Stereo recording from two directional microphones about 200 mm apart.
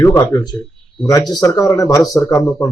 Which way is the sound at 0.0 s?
15° left (ahead or behind).